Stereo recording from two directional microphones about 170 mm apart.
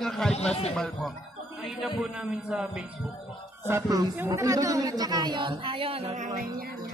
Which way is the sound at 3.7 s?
20° right (ahead or behind).